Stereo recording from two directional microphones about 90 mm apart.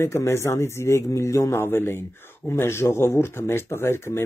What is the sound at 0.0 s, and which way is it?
A man's voice, 30° left (ahead or behind).